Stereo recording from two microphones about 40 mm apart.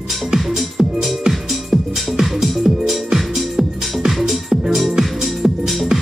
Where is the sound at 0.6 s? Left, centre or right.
Centre.